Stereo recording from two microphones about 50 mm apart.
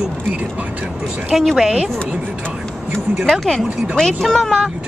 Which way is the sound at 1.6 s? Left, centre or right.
Centre.